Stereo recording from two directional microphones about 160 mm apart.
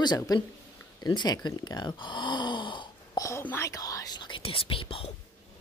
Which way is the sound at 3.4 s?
15° left (ahead or behind).